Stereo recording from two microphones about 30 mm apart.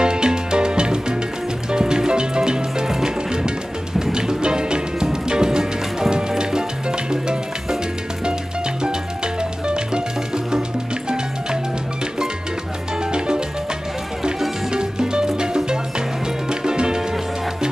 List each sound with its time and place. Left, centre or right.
0.0 s music: right
8.8 s music: right
14.7 s music: right